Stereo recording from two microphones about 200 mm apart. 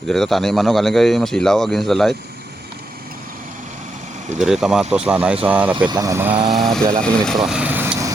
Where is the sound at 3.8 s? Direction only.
35° right (ahead or behind).